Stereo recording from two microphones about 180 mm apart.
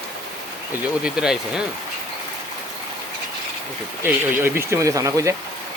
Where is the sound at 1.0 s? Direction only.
5° right (ahead or behind).